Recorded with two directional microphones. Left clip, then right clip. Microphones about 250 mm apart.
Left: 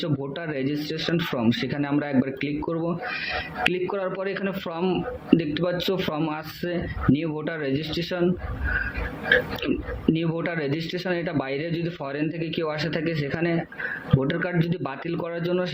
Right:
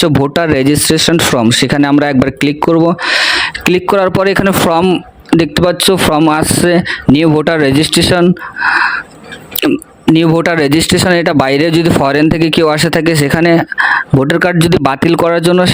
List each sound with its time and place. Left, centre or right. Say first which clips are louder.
0.0 s speech: right 19 dB; right
9.6 s speech: right 13 dB; right